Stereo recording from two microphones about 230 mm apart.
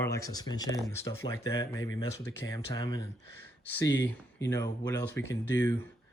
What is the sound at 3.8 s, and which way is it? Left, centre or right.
Speech, left.